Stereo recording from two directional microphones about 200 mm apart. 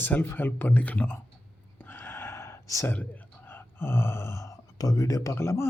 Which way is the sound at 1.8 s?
10° left (ahead or behind).